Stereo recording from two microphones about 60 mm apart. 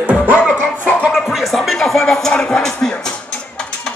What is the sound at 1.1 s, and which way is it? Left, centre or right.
Music, centre.